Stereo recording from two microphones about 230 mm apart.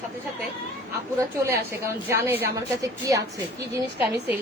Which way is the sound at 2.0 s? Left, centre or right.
Centre.